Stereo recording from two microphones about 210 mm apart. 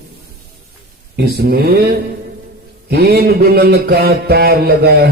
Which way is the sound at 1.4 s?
45° right (ahead or behind).